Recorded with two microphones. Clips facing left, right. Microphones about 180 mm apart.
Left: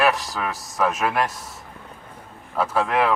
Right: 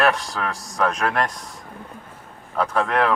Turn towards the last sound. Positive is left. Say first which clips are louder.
# even
turn(degrees=5)  # may be behind; listen again after turning